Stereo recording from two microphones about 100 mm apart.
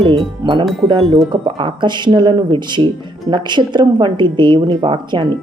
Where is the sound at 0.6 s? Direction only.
Centre (ahead or behind).